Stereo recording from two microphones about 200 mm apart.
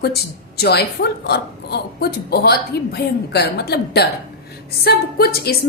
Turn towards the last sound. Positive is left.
turn(degrees=50)  # may be behind; listen again after turning